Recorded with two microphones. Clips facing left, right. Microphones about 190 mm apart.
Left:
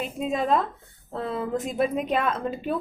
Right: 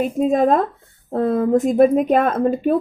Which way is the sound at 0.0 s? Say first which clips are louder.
Right 10 dB; 50° right (ahead or behind).